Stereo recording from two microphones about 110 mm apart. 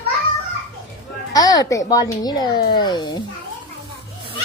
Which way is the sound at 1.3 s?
35° left (ahead or behind).